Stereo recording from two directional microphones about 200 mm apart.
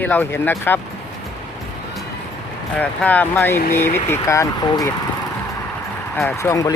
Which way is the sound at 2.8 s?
5° left (ahead or behind).